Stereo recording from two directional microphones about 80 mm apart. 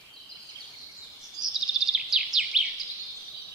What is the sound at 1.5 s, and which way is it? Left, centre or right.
Bird vocalization, centre.